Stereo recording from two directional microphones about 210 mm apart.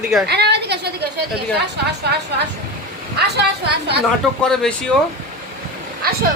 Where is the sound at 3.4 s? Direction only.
50° right (ahead or behind).